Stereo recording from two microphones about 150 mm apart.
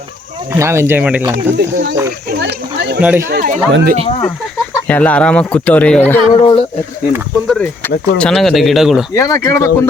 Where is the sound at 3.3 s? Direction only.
65° right (ahead or behind).